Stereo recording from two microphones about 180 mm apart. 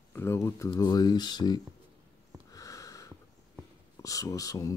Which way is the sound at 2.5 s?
20° left (ahead or behind).